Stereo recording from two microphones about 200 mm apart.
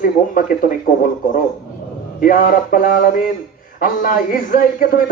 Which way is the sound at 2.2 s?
45° left (ahead or behind).